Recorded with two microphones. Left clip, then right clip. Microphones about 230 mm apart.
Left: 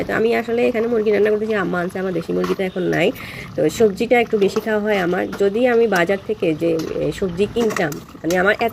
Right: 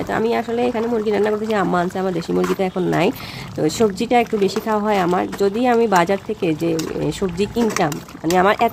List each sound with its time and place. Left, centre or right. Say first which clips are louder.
0.1 s speech: left 1 dB; centre